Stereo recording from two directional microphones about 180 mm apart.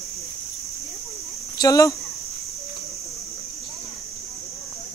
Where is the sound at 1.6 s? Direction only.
20° left (ahead or behind).